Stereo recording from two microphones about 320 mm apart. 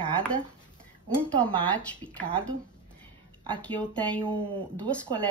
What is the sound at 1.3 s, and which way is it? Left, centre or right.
Speech, centre.